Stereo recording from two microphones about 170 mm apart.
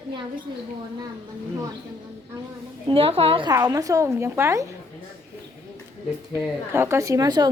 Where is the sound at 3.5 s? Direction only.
20° right (ahead or behind).